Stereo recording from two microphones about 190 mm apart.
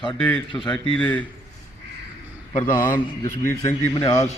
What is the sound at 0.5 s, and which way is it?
Speech, 10° left (ahead or behind).